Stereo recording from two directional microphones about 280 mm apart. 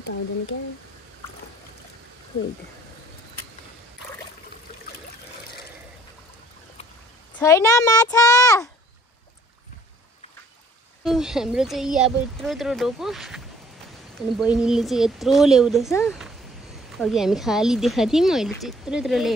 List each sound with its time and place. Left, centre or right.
0.0 s speech: left
7.3 s a child's voice: centre
11.1 s speech: centre
14.4 s speech: centre
15.9 s a child's voice: centre